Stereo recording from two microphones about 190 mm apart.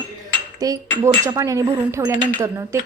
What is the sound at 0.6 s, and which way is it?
Speech, 20° right (ahead or behind).